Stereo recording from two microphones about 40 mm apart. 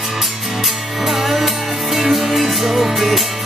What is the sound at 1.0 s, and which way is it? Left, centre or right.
Music, centre.